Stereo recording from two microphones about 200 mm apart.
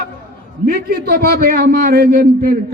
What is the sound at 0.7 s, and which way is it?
A man's voice, 50° right (ahead or behind).